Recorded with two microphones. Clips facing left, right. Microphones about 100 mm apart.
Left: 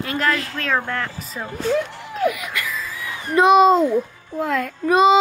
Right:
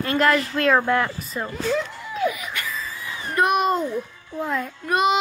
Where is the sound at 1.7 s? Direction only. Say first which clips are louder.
Left 5 dB; 50° left (ahead or behind).